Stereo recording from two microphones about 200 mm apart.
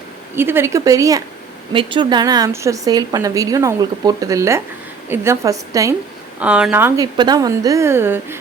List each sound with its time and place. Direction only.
0.3 s a woman's voice: 10° right (ahead or behind)